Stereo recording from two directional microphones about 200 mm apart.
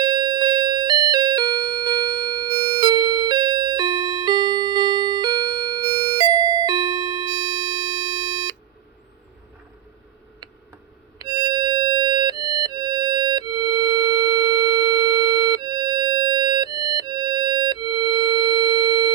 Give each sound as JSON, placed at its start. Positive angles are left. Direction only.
{"t": 0.0, "sound": "music", "side_deg": -20}
{"t": 11.2, "sound": "music", "side_deg": -20}